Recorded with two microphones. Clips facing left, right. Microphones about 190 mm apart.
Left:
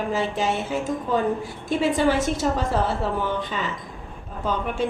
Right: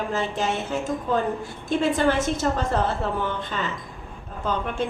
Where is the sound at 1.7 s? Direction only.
5° left (ahead or behind).